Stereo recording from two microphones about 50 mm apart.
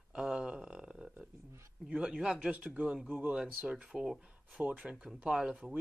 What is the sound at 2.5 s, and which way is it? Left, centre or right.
Speech, right.